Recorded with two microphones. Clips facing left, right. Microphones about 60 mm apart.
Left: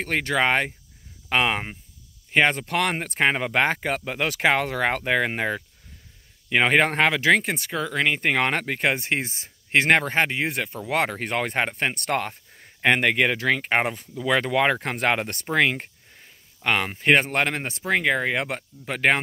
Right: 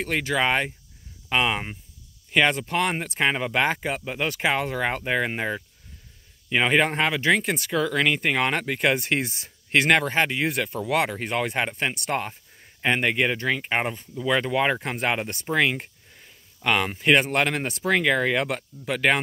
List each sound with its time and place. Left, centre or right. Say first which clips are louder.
0.2 s speech: left 2 dB; left
2.3 s speech: left 1 dB; left
2.6 s speech: even; left
3.0 s speech: left 2 dB; left
7.1 s speech: left 2 dB; left
7.4 s speech: right 3 dB; left
8.2 s speech: left 1 dB; left
10.9 s speech: left 1 dB; left
15.4 s speech: left 1 dB; left
16.2 s a sound: right 1 dB; left
17.0 s speech: left 1 dB; left
18.9 s speech: left 1 dB; left